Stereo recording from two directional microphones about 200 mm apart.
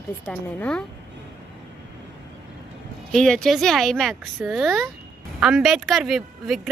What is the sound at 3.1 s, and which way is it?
A woman's voice, 5° left (ahead or behind).